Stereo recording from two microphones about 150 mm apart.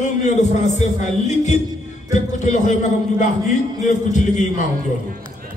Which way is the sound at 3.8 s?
50° left (ahead or behind).